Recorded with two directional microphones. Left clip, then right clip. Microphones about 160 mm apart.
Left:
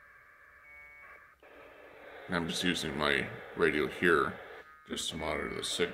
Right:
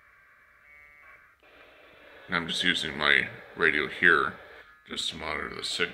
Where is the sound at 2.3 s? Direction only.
15° left (ahead or behind).